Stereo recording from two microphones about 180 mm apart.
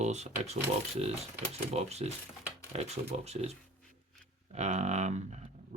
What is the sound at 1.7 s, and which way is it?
Speech, 35° right (ahead or behind).